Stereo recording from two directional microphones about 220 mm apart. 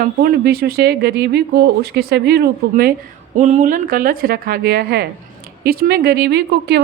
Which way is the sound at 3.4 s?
30° right (ahead or behind).